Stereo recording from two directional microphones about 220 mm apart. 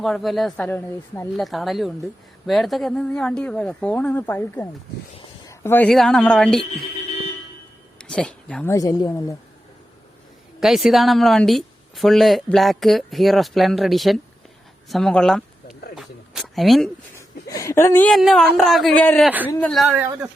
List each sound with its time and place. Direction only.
0.0 s a woman's voice: centre (ahead or behind)
7.9 s a sound: 5° left (ahead or behind)
8.7 s speech: 15° left (ahead or behind)
10.6 s a woman's voice: centre (ahead or behind)
16.0 s a sound: centre (ahead or behind)
17.2 s a woman's voice: 15° left (ahead or behind); by 20.3 s 10° right (ahead or behind)